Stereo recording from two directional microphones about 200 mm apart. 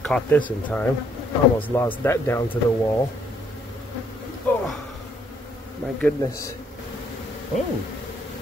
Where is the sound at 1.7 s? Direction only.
15° left (ahead or behind).